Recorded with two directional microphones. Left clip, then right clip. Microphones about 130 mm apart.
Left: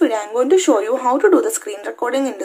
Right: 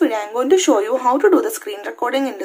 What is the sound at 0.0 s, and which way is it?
Speech, 20° left (ahead or behind).